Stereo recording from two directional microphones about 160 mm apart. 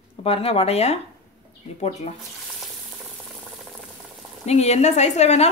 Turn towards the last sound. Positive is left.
turn(degrees=45)  # may be behind; listen again after turning